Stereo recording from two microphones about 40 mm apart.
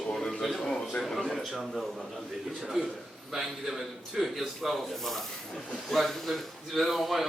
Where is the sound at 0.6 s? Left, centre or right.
Centre.